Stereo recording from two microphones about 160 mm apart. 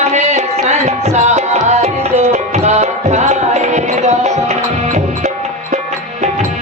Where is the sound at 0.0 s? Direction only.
45° right (ahead or behind).